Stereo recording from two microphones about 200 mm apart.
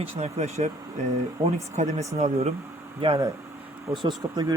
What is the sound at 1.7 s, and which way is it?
Speech, 35° right (ahead or behind).